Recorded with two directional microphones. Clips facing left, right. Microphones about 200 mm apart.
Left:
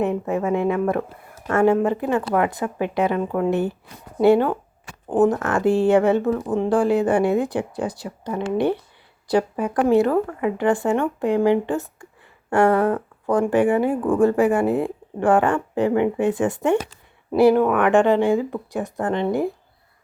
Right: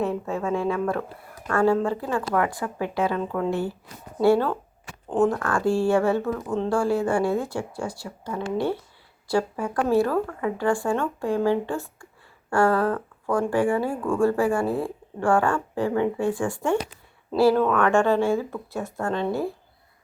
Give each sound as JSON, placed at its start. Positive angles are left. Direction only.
{"t": 0.0, "sound": "a woman's voice", "side_deg": 20}